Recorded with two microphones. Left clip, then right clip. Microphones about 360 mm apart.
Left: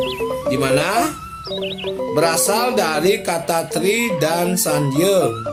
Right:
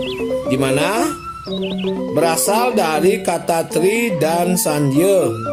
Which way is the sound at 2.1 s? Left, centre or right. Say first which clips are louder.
Right 1 dB; centre.